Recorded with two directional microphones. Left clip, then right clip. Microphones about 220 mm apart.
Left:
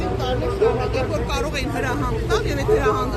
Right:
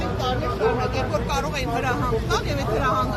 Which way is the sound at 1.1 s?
5° left (ahead or behind).